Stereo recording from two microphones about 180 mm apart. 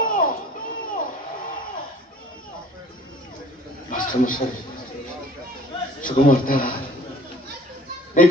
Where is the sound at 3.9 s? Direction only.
50° left (ahead or behind).